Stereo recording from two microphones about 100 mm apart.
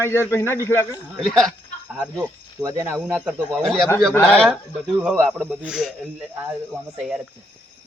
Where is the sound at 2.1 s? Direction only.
35° right (ahead or behind).